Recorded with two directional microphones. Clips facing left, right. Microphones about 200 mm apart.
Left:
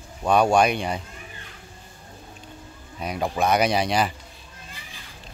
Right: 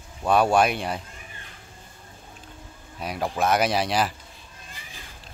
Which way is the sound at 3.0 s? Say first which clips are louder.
Left 1 dB; centre (ahead or behind).